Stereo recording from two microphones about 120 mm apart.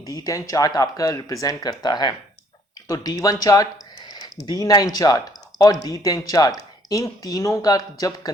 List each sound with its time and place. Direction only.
0.0 s speech: 30° left (ahead or behind)